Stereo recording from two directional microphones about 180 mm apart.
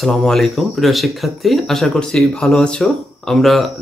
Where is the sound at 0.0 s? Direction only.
Centre (ahead or behind).